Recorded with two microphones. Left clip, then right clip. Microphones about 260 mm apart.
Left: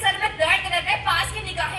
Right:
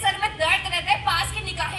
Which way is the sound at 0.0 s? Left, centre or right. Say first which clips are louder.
Left 1 dB; right.